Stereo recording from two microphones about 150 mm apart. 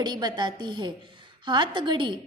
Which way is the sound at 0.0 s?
30° right (ahead or behind).